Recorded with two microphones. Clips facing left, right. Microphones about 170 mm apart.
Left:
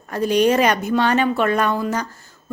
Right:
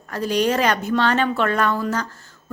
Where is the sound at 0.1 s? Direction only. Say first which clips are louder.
Left 4 dB; 20° left (ahead or behind).